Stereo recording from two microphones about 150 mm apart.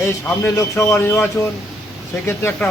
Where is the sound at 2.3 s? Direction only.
15° left (ahead or behind).